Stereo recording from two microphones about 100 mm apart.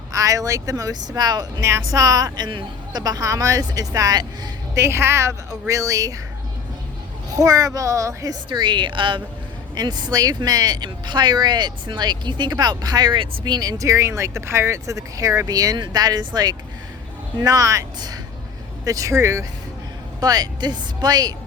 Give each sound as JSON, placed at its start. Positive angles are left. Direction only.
{"t": 0.1, "sound": "speech", "side_deg": -35}
{"t": 1.6, "sound": "speech", "side_deg": -35}
{"t": 3.0, "sound": "speech", "side_deg": -35}
{"t": 4.7, "sound": "speech", "side_deg": -25}
{"t": 7.3, "sound": "speech", "side_deg": -35}
{"t": 8.4, "sound": "speech", "side_deg": -50}
{"t": 9.7, "sound": "speech", "side_deg": -45}
{"t": 20.1, "sound": "speech", "side_deg": -40}